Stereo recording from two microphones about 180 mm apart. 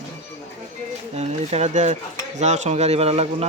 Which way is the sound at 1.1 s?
40° right (ahead or behind).